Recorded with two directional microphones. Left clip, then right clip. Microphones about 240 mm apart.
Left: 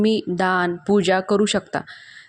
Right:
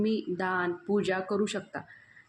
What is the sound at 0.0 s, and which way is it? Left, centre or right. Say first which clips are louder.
Speech: left 10 dB; left.